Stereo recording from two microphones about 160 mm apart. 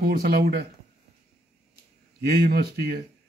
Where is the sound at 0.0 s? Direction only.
70° right (ahead or behind).